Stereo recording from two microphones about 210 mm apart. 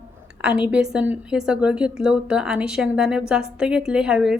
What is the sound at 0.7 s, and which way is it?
Speech, 5° right (ahead or behind).